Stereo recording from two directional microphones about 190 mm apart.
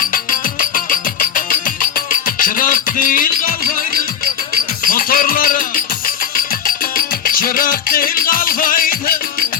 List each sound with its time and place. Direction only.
0.0 s music: 45° left (ahead or behind)
4.9 s music: 50° left (ahead or behind)